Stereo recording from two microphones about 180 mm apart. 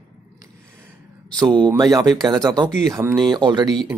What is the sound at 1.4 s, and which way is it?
Speech, 25° right (ahead or behind).